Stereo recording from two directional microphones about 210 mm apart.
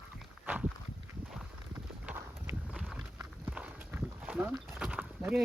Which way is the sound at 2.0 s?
10° right (ahead or behind).